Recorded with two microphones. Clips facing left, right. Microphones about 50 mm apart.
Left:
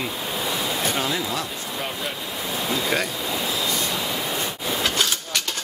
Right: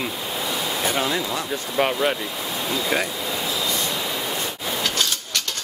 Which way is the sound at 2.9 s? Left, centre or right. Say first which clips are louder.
Right 2 dB; centre.